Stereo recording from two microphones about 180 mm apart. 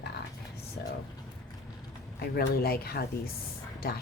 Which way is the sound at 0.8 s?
60° left (ahead or behind).